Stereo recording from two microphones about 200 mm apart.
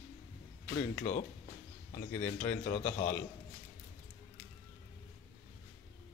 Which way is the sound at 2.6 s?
45° left (ahead or behind).